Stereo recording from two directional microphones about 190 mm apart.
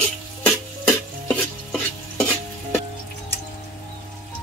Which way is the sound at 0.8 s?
5° left (ahead or behind).